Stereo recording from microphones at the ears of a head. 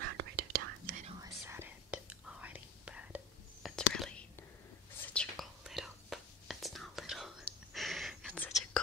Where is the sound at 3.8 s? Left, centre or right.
Left.